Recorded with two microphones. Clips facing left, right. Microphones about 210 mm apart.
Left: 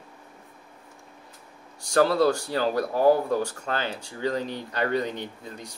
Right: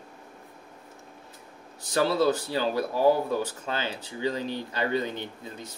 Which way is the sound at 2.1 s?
Centre (ahead or behind).